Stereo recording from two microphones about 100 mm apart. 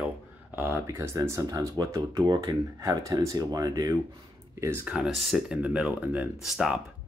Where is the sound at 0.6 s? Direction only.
25° right (ahead or behind); by 2.5 s 45° right (ahead or behind).